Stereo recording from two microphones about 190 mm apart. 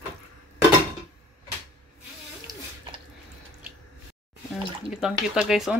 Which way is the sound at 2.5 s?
20° right (ahead or behind).